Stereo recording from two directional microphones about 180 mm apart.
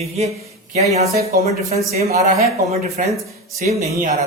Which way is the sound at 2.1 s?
35° right (ahead or behind).